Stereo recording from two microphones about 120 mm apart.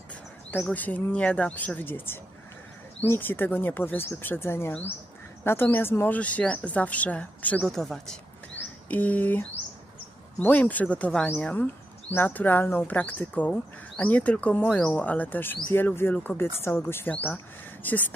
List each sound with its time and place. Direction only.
0.7 s speech: 15° left (ahead or behind)
10.4 s speech: 15° left (ahead or behind)